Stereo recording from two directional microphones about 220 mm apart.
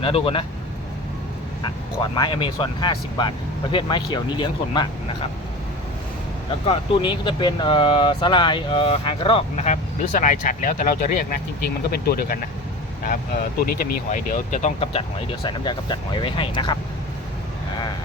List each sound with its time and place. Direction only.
0.0 s speech: 25° left (ahead or behind)
2.0 s speech: 20° left (ahead or behind)
6.7 s speech: 20° left (ahead or behind); by 12.5 s 40° left (ahead or behind)
13.6 s speech: 40° left (ahead or behind); by 16.7 s 20° left (ahead or behind)